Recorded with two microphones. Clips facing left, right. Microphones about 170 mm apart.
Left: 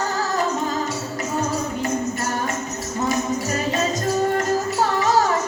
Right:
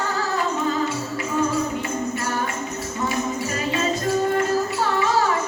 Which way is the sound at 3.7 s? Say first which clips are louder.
Right 1 dB; 40° left (ahead or behind).